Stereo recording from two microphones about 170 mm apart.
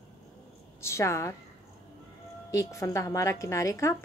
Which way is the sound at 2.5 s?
20° left (ahead or behind).